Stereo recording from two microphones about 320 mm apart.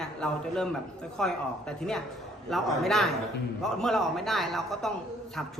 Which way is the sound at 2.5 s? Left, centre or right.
Centre.